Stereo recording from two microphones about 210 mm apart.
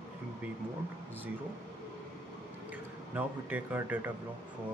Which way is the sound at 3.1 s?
10° right (ahead or behind).